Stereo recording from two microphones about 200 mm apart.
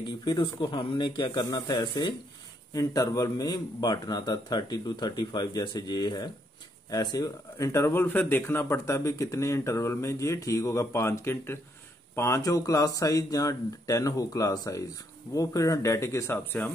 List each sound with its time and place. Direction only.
0.0 s speech: 20° left (ahead or behind)